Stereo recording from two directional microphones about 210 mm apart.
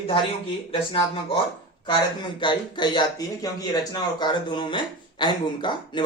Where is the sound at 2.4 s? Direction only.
20° left (ahead or behind).